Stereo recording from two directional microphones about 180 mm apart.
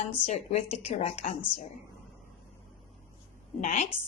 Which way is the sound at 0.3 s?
40° left (ahead or behind).